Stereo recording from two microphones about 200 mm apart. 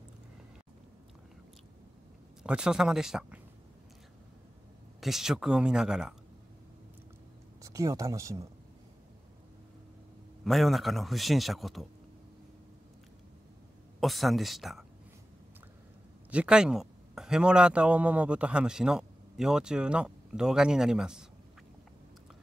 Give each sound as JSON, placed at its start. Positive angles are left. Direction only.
{"t": 2.4, "sound": "a man's voice", "side_deg": -5}
{"t": 5.0, "sound": "a man's voice", "side_deg": 0}
{"t": 7.6, "sound": "speech", "side_deg": -15}
{"t": 10.4, "sound": "a man's voice", "side_deg": 0}
{"t": 13.9, "sound": "speech", "side_deg": 0}
{"t": 16.3, "sound": "speech", "side_deg": -5}